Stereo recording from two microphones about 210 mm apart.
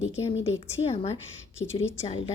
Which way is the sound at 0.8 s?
30° left (ahead or behind).